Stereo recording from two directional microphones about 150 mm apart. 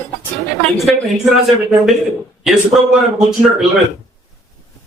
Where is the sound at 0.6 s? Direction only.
Centre (ahead or behind).